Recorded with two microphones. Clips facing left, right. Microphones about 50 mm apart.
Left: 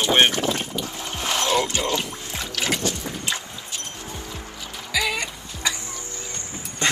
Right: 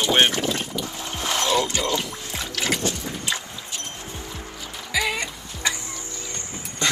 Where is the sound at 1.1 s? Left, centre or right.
Left.